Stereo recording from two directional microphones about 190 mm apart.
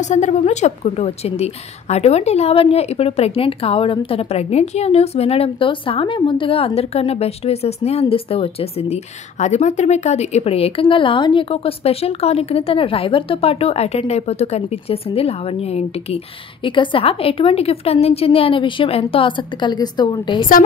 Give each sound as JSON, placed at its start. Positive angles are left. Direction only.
{"t": 0.0, "sound": "a woman's voice", "side_deg": 40}